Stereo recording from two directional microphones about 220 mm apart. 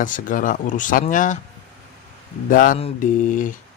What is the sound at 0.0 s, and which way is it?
Speech, 35° left (ahead or behind).